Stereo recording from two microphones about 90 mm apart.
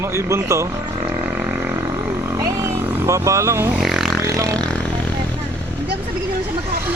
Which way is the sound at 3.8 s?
5° right (ahead or behind).